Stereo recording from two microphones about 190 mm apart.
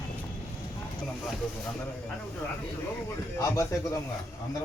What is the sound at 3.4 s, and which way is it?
Speech, 15° left (ahead or behind).